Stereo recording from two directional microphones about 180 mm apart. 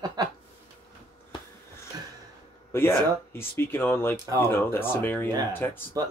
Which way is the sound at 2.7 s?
15° left (ahead or behind).